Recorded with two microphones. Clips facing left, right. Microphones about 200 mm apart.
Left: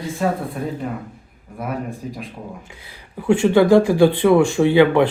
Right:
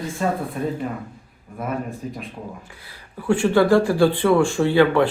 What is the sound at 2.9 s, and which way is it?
Speech, 20° left (ahead or behind).